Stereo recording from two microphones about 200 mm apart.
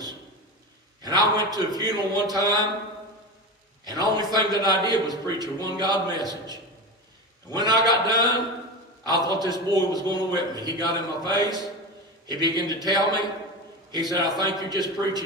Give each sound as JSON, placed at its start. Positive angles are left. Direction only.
{"t": 1.3, "sound": "a man's voice", "side_deg": -20}
{"t": 3.8, "sound": "a man's voice", "side_deg": -20}